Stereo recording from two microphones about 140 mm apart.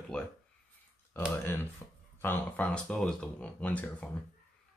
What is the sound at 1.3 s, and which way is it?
Speech, 20° left (ahead or behind).